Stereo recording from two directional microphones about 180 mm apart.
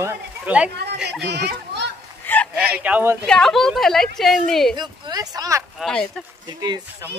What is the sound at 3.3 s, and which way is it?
A woman's voice, 5° left (ahead or behind).